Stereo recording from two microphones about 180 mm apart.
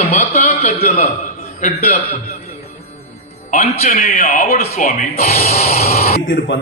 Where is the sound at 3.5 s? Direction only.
35° left (ahead or behind).